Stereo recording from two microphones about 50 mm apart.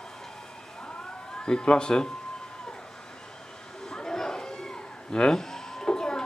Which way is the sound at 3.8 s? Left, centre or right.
Centre.